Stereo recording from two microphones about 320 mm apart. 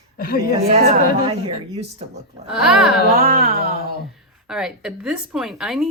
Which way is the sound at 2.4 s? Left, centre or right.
Centre.